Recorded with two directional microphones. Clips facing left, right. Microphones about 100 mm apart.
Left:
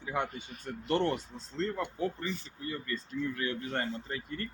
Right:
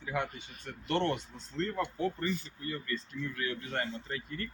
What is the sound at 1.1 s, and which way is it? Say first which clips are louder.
Speech: left 1 dB; 35° left (ahead or behind).